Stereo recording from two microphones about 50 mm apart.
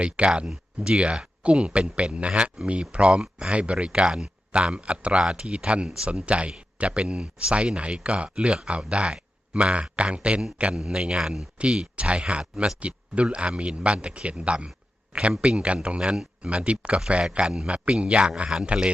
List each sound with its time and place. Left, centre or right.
0.0 s speech: right
0.4 s a man's voice: centre